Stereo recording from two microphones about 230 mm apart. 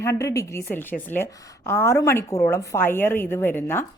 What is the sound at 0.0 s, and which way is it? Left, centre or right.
A woman's voice, centre.